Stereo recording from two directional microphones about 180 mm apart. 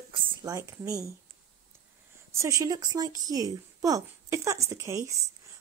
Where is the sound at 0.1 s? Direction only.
25° right (ahead or behind).